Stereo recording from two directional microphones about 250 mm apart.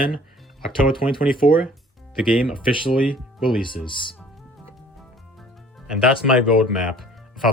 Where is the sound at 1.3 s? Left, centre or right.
Left.